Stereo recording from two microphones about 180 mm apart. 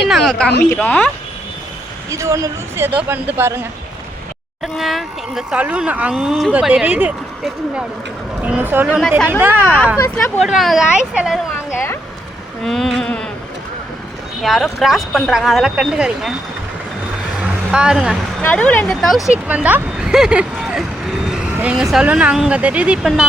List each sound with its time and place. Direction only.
0.1 s speech: centre (ahead or behind)
2.0 s speech: 15° right (ahead or behind)
4.6 s speech: centre (ahead or behind)
9.0 s speech: 5° left (ahead or behind)
9.4 s speech: 10° right (ahead or behind)
10.0 s speech: 15° left (ahead or behind)
10.4 s speech: centre (ahead or behind)
11.7 s speech: 15° left (ahead or behind)
12.6 s insect: centre (ahead or behind)
14.4 s speech: centre (ahead or behind)
17.4 s vehicle: 5° right (ahead or behind)
18.4 s speech: 10° left (ahead or behind)
19.5 s speech: 10° right (ahead or behind)